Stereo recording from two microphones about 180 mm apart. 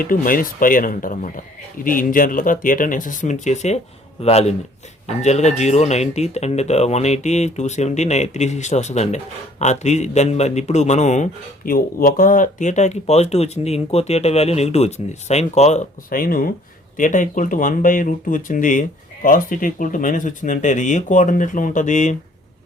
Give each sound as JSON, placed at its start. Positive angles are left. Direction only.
{"t": 0.0, "sound": "speech", "side_deg": 50}